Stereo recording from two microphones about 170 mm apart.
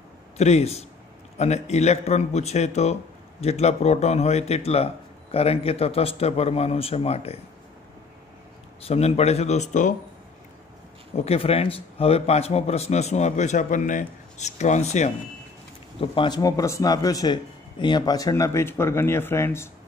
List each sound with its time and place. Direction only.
0.4 s a man's voice: 40° left (ahead or behind)
8.8 s a man's voice: 40° left (ahead or behind)
11.1 s a man's voice: 35° left (ahead or behind)
16.0 s a man's voice: 25° left (ahead or behind)